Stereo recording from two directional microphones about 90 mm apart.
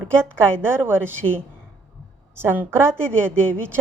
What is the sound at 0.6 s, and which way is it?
A woman's voice, 25° right (ahead or behind).